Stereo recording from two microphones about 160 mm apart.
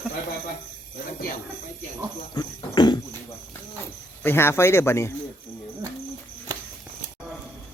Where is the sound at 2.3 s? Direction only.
30° left (ahead or behind).